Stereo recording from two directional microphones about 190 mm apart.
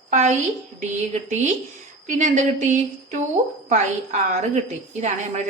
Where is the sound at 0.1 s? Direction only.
40° right (ahead or behind).